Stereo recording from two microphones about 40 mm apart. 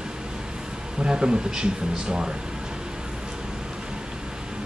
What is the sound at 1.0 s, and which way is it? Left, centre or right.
Speech, right.